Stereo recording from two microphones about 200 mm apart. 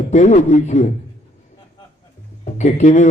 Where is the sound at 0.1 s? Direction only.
35° left (ahead or behind).